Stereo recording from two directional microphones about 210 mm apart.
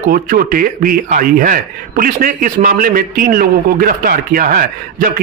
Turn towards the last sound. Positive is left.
turn(degrees=-40)  # may be behind; listen again after turning